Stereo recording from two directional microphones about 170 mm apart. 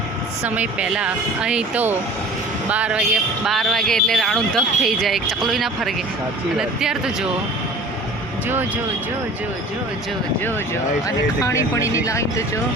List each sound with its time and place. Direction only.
0.4 s speech: 10° right (ahead or behind)
11.0 s speech: 15° left (ahead or behind)